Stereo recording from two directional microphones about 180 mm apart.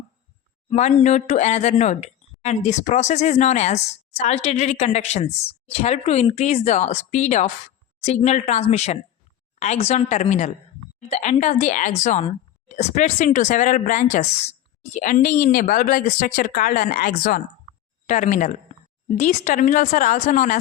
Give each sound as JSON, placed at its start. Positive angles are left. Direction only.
{"t": 0.7, "sound": "a woman's voice", "side_deg": 35}